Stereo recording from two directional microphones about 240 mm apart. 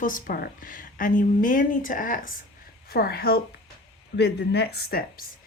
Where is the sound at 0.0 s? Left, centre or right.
Left.